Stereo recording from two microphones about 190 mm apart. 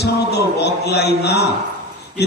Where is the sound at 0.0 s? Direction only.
60° left (ahead or behind).